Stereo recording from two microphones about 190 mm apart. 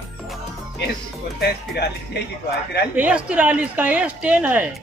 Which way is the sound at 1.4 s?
60° left (ahead or behind).